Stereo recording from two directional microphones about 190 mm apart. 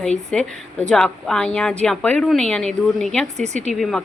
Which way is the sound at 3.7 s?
Centre (ahead or behind).